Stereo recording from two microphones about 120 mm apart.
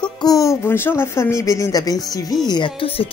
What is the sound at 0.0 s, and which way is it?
Speech, 30° left (ahead or behind).